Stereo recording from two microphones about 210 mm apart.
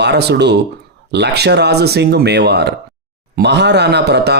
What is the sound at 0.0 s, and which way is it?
Speech, 55° right (ahead or behind).